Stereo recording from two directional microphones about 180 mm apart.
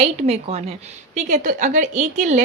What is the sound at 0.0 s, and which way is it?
A woman's voice, 35° right (ahead or behind).